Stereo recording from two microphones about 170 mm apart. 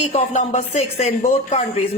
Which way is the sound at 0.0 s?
40° left (ahead or behind).